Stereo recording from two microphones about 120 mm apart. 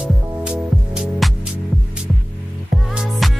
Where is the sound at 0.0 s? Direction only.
5° right (ahead or behind).